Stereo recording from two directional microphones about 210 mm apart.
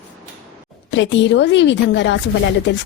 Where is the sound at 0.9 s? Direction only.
60° left (ahead or behind).